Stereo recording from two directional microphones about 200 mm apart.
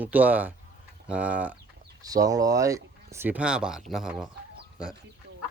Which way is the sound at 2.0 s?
20° right (ahead or behind).